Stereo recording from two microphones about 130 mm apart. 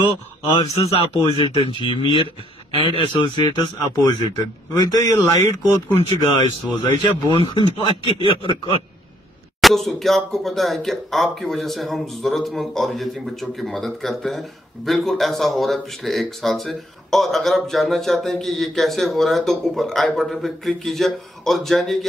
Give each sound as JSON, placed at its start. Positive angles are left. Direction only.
{"t": 0.5, "sound": "speech", "side_deg": 50}
{"t": 9.6, "sound": "speech", "side_deg": 0}